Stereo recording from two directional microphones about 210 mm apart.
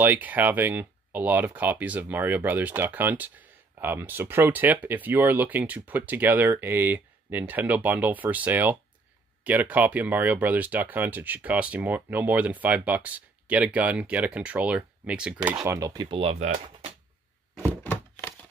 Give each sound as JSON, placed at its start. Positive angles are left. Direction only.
{"t": 0.0, "sound": "speech", "side_deg": -10}
{"t": 17.6, "sound": "thunk", "side_deg": 10}